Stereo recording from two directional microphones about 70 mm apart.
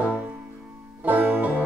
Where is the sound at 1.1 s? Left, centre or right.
Right.